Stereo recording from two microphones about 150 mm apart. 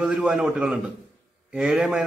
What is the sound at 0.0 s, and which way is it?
A man's voice, 5° right (ahead or behind).